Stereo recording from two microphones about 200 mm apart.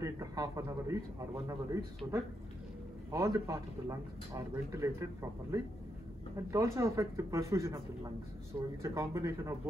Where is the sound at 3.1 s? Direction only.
15° right (ahead or behind).